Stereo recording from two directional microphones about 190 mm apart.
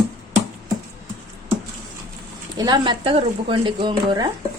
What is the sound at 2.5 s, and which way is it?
Speech, 20° right (ahead or behind).